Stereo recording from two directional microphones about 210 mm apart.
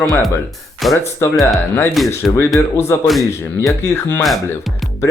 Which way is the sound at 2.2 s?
Centre (ahead or behind).